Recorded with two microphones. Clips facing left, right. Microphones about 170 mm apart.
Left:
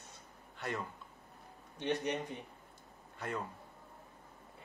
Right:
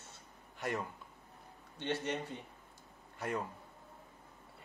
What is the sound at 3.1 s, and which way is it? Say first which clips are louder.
Speech: right 2 dB; 10° right (ahead or behind).